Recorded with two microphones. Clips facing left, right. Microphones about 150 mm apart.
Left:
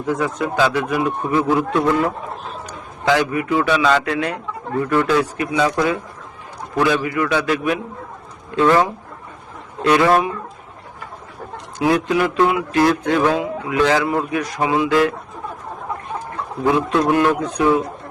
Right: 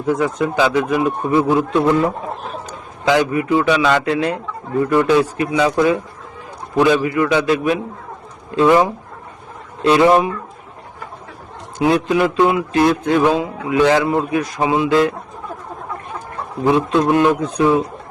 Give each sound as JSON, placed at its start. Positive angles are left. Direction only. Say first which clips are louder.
{"t": 0.0, "sound": "a man's voice", "louder": "right 3 dB", "side_deg": -15}
{"t": 4.9, "sound": "speech", "louder": "right 3 dB", "side_deg": -15}
{"t": 5.2, "sound": "a man's voice", "louder": "right 3 dB", "side_deg": -25}
{"t": 5.5, "sound": "speech", "louder": "right 3 dB", "side_deg": -15}
{"t": 7.0, "sound": "a man's voice", "louder": "right 3 dB", "side_deg": -25}
{"t": 8.6, "sound": "a man's voice", "louder": "right 2 dB", "side_deg": -15}
{"t": 11.8, "sound": "a man's voice", "louder": "right 2 dB", "side_deg": -20}
{"t": 16.6, "sound": "a man's voice", "louder": "right 2 dB", "side_deg": -20}